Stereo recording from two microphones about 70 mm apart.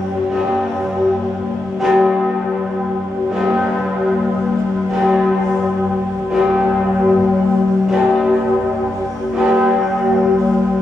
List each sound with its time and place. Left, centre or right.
1.9 s church bell: centre
7.9 s church bell: centre
9.5 s church bell: centre